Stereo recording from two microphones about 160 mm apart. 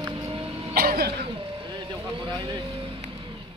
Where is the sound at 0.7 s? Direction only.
75° right (ahead or behind).